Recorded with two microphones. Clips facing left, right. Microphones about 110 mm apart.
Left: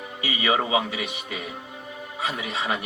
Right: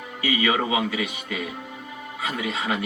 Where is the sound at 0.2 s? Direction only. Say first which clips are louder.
Right 1 dB; 25° left (ahead or behind).